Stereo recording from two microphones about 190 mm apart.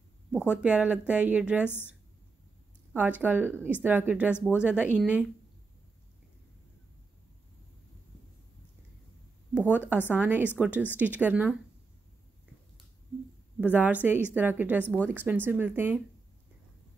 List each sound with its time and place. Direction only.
0.5 s a woman's voice: 5° right (ahead or behind)
2.9 s a woman's voice: 10° right (ahead or behind)
9.5 s a sound: 5° right (ahead or behind)
9.8 s a woman's voice: 10° right (ahead or behind)
13.6 s a woman's voice: 10° right (ahead or behind)